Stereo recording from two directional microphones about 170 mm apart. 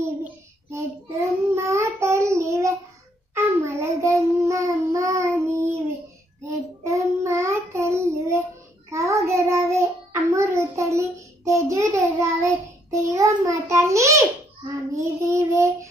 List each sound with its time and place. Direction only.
0.0 s child singing: 15° right (ahead or behind)